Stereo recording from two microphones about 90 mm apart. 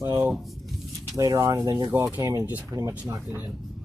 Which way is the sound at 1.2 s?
35° right (ahead or behind).